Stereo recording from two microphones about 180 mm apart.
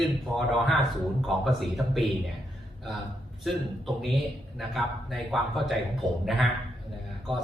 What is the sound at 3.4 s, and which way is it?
A man's voice, centre (ahead or behind).